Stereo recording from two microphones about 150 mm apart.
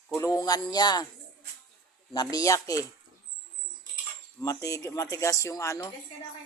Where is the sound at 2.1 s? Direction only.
25° left (ahead or behind).